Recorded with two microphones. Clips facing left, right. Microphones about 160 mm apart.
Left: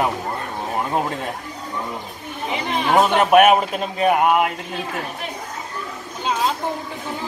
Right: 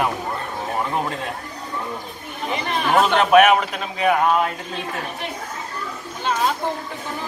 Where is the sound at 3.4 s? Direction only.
40° left (ahead or behind).